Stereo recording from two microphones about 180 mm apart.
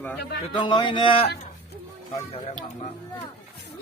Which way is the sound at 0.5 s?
25° left (ahead or behind).